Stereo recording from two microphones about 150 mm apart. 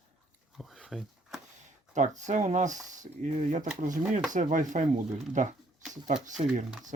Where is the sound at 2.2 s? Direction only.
55° right (ahead or behind).